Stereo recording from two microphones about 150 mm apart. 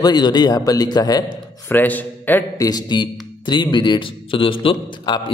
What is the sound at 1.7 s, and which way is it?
Speech, 10° left (ahead or behind).